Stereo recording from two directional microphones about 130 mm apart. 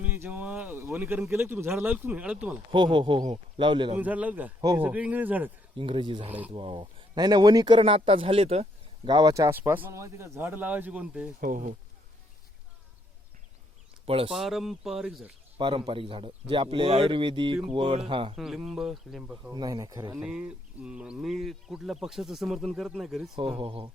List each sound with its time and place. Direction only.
0.0 s a sound: 15° right (ahead or behind)
1.3 s speech: 20° right (ahead or behind)
2.7 s speech: 35° right (ahead or behind)
3.9 s speech: 10° right (ahead or behind)
5.7 s speech: 40° right (ahead or behind)
9.0 s speech: 30° right (ahead or behind); by 11.3 s 10° right (ahead or behind)
11.3 s speech: 90° right
14.0 s speech: 45° right (ahead or behind)
14.3 s speech: centre (ahead or behind)
15.5 s speech: 40° right (ahead or behind)
18.3 s speech: centre (ahead or behind)
19.5 s speech: 30° right (ahead or behind)
20.1 s speech: 10° right (ahead or behind)
23.3 s speech: 40° right (ahead or behind)